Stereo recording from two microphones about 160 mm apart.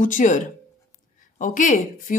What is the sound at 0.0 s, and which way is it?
Speech, 55° left (ahead or behind).